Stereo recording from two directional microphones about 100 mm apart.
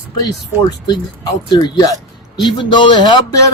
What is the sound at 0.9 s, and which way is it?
Speech, 45° left (ahead or behind).